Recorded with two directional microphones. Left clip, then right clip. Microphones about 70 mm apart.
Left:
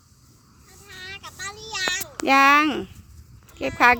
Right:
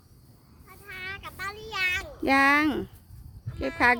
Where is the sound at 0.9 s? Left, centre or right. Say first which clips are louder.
Even; right.